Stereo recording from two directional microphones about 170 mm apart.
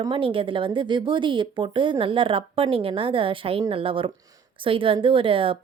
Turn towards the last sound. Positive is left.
turn(degrees=-30)  # may be behind; listen again after turning